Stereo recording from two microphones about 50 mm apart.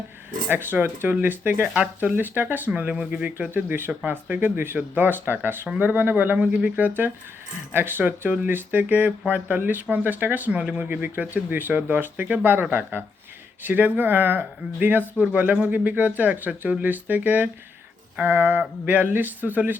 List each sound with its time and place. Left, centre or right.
0.5 s speech: right
6.7 s speech: right
10.8 s speech: right
13.7 s speech: right
15.2 s speech: right
15.4 s speech: right